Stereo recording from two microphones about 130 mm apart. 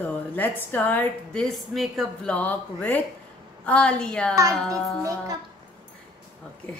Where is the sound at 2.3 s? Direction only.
10° left (ahead or behind).